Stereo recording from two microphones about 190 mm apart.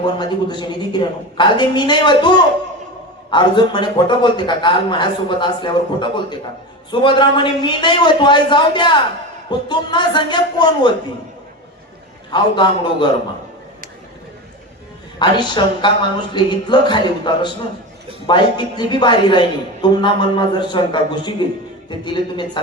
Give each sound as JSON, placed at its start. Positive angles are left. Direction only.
{"t": 0.2, "sound": "a woman's voice", "side_deg": 25}
{"t": 12.3, "sound": "a woman's voice", "side_deg": 25}
{"t": 15.2, "sound": "a woman's voice", "side_deg": 25}